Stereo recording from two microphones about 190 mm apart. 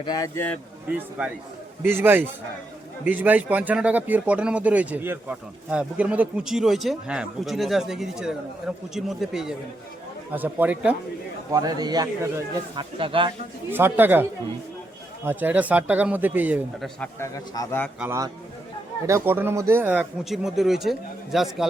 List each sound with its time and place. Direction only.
0.0 s a man's voice: 20° left (ahead or behind)
0.9 s speech: 5° right (ahead or behind)
11.5 s a man's voice: 20° right (ahead or behind)
13.7 s speech: 10° right (ahead or behind)
17.0 s a man's voice: 15° left (ahead or behind)
18.0 s speech: 15° right (ahead or behind)